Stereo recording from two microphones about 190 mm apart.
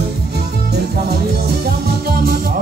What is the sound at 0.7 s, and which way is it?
Music, 60° right (ahead or behind).